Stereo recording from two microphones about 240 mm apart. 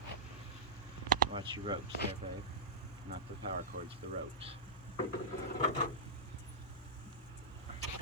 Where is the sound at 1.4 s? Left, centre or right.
Centre.